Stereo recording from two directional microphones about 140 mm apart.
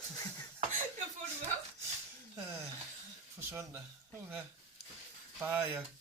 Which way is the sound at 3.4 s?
15° right (ahead or behind).